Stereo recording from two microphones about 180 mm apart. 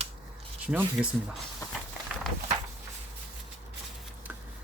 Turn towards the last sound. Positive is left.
turn(degrees=-10)  # may be behind; listen again after turning